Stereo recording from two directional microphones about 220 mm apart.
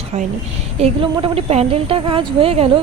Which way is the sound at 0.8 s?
20° right (ahead or behind).